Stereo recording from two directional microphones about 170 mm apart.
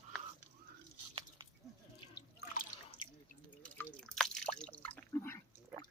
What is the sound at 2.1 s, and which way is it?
Drip, 70° left (ahead or behind).